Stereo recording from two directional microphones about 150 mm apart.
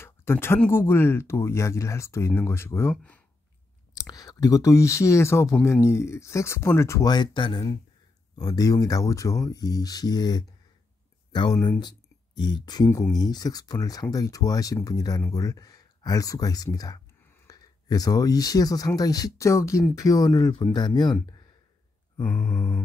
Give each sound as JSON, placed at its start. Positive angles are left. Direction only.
{"t": 0.0, "sound": "speech", "side_deg": 15}
{"t": 4.1, "sound": "speech", "side_deg": 25}
{"t": 12.4, "sound": "speech", "side_deg": 30}
{"t": 22.2, "sound": "speech", "side_deg": 10}